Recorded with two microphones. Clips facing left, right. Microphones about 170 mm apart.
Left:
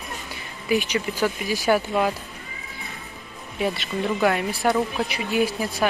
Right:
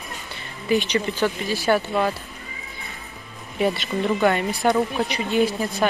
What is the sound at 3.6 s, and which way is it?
Speech, centre (ahead or behind).